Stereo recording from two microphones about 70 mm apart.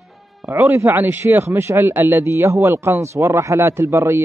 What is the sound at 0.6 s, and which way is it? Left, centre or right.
Speech, right.